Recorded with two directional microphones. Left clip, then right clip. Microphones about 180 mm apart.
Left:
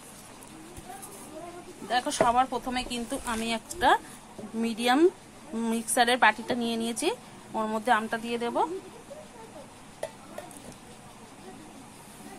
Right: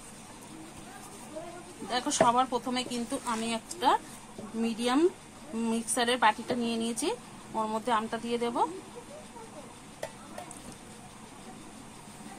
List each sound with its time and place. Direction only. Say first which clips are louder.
1.9 s a woman's voice: left 1 dB; 25° left (ahead or behind)